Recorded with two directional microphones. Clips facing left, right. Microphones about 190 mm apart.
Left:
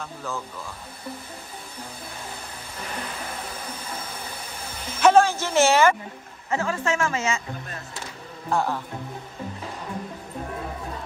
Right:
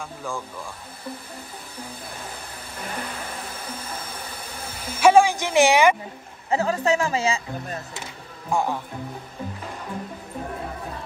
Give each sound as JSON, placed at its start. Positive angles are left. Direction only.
{"t": 0.0, "sound": "a woman's voice", "side_deg": -10}
{"t": 5.0, "sound": "a woman's voice", "side_deg": -10}
{"t": 6.5, "sound": "a woman's voice", "side_deg": -35}
{"t": 8.5, "sound": "a woman's voice", "side_deg": -15}